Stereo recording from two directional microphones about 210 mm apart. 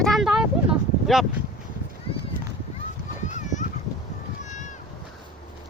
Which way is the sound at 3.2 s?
35° left (ahead or behind).